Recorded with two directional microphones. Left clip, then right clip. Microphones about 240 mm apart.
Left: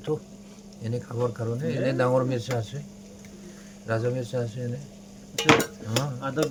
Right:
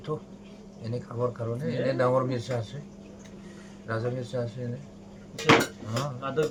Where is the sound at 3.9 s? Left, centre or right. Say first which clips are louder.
Left 4 dB; left.